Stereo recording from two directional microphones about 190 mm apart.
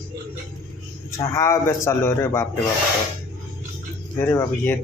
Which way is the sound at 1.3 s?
15° left (ahead or behind).